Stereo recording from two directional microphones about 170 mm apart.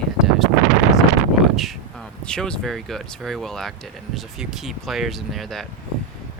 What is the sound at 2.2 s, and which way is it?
Speech, 5° left (ahead or behind).